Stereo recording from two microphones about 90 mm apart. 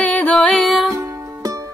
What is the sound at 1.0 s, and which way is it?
Music, 35° right (ahead or behind).